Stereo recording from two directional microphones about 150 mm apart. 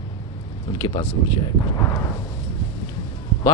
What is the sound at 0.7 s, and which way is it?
Speech, 30° left (ahead or behind).